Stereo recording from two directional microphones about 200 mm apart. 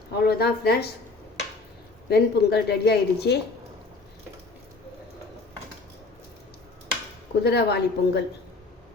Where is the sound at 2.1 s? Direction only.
55° left (ahead or behind).